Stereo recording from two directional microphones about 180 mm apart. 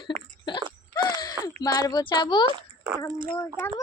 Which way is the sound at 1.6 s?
20° left (ahead or behind).